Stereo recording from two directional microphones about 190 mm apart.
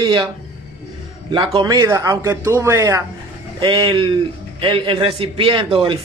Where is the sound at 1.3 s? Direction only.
25° right (ahead or behind).